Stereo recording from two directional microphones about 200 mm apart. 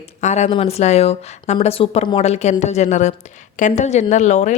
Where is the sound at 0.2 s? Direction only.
35° left (ahead or behind).